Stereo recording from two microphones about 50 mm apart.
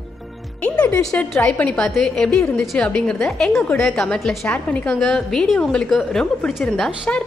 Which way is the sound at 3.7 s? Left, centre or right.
Centre.